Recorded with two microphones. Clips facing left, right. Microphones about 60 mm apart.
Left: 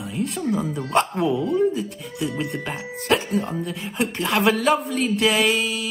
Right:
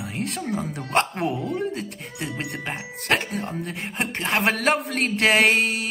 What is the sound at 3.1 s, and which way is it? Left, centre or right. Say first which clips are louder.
Speech: left 3 dB; right.